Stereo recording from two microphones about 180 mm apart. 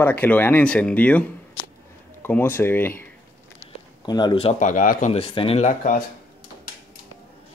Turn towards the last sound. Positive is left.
turn(degrees=45)  # may be behind; listen again after turning